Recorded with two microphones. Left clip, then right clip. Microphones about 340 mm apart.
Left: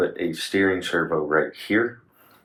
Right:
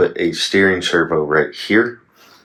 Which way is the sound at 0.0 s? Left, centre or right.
Right.